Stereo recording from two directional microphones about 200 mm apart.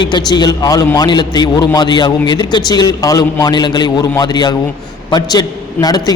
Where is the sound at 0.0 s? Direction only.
20° left (ahead or behind).